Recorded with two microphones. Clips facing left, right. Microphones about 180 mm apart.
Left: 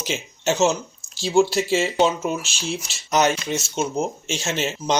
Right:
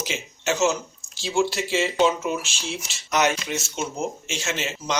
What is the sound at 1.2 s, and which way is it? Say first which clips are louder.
Speech: left 5 dB; 35° left (ahead or behind).